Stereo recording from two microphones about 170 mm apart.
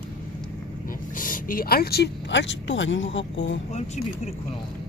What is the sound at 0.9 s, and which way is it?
Speech, 55° left (ahead or behind).